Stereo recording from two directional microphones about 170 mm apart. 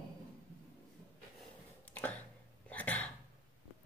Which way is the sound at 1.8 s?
10° left (ahead or behind).